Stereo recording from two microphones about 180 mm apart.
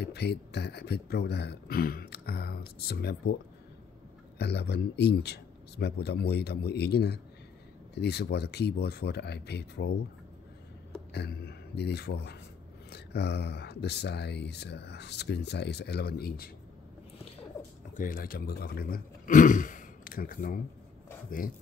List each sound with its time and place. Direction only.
0.0 s speech: 65° left (ahead or behind)
4.4 s speech: 65° left (ahead or behind)
11.1 s speech: 65° left (ahead or behind)
17.9 s speech: 50° left (ahead or behind)